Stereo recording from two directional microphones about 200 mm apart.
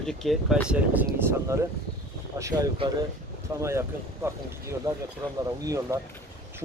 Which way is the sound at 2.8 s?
25° right (ahead or behind).